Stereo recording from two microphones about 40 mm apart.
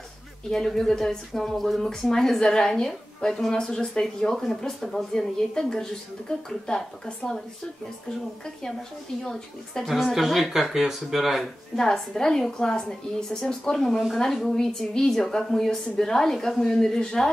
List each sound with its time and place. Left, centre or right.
0.5 s a woman's voice: centre
9.2 s a woman's voice: centre
10.0 s speech: centre
11.7 s a woman's voice: centre
13.7 s a woman's voice: centre